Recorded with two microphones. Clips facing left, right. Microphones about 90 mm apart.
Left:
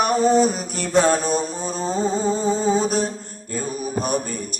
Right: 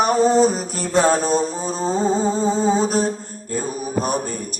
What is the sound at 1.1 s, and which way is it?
Music, 35° right (ahead or behind).